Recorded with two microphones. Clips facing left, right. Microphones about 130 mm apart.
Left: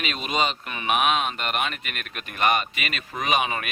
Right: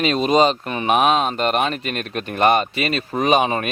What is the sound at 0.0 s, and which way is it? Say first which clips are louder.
Speech: right 10 dB; 35° right (ahead or behind).